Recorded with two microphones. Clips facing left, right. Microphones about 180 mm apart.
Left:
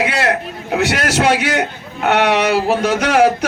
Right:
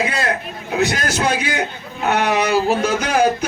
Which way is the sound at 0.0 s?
75° left (ahead or behind).